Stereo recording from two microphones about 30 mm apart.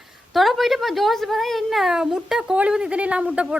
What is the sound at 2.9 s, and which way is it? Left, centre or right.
Speech, right.